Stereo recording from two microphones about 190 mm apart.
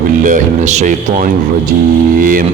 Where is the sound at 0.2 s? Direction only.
45° right (ahead or behind).